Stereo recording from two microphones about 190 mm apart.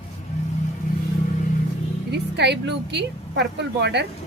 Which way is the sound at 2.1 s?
60° right (ahead or behind).